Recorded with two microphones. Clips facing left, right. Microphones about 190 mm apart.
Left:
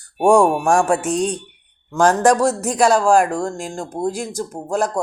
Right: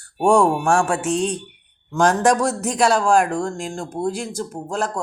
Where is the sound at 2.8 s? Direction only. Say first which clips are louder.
Left 3 dB; 10° left (ahead or behind).